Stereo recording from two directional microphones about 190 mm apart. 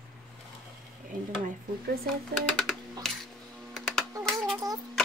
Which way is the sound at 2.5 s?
Centre (ahead or behind).